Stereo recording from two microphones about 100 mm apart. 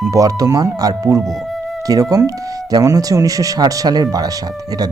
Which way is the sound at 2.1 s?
35° right (ahead or behind).